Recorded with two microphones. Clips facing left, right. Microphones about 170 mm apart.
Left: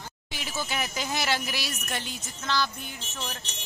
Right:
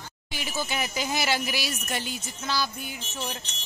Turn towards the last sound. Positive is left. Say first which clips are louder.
# right 3 dB
turn(degrees=-15)  # may be behind; listen again after turning